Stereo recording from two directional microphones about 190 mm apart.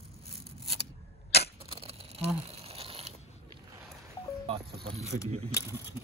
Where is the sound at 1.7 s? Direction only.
30° right (ahead or behind).